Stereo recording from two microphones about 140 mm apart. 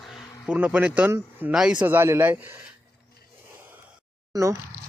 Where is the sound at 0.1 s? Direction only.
10° right (ahead or behind).